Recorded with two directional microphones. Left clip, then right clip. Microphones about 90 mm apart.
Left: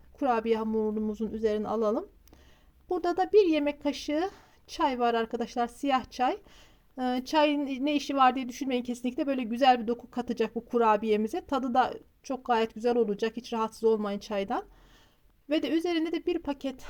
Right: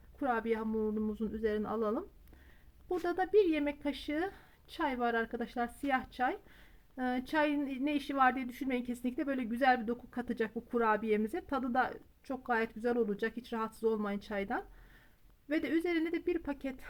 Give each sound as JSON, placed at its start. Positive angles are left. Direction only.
{"t": 0.2, "sound": "a woman's voice", "side_deg": 35}